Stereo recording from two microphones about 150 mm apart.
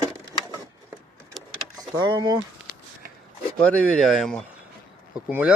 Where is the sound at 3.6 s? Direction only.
10° left (ahead or behind); by 5.5 s 10° right (ahead or behind).